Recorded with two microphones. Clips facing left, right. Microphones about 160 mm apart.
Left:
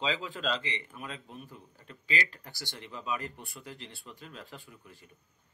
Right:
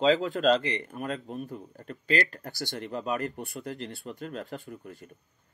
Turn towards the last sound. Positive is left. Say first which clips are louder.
# right 11 dB
turn(degrees=-50)  # may be behind; listen again after turning